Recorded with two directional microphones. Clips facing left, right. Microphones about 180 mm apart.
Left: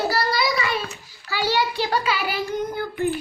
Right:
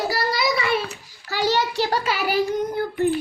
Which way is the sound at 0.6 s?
60° right (ahead or behind).